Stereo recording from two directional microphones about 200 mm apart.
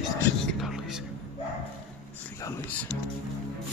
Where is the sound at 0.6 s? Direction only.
Centre (ahead or behind).